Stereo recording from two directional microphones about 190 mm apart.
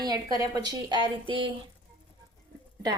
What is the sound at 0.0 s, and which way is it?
Speech, 20° right (ahead or behind).